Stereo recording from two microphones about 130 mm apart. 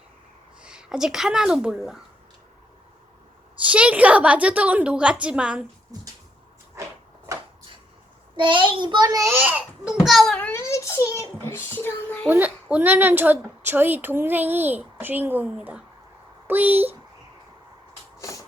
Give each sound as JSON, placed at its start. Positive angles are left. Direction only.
{"t": 0.6, "sound": "speech", "side_deg": -5}
{"t": 3.6, "sound": "a woman's voice", "side_deg": -10}
{"t": 8.4, "sound": "a child's voice", "side_deg": -40}
{"t": 9.4, "sound": "a child's voice", "side_deg": -10}
{"t": 10.3, "sound": "a sound", "side_deg": 15}
{"t": 11.1, "sound": "a child's voice", "side_deg": 20}
{"t": 12.3, "sound": "a woman's voice", "side_deg": -15}
{"t": 18.2, "sound": "vehicle", "side_deg": 25}